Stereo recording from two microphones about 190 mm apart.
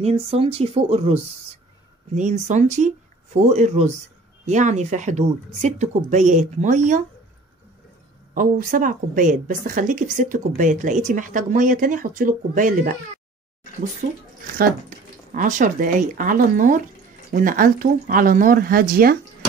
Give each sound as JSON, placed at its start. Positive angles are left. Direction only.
{"t": 0.0, "sound": "speech", "side_deg": -30}
{"t": 8.4, "sound": "a woman's voice", "side_deg": -45}
{"t": 15.3, "sound": "a woman's voice", "side_deg": -40}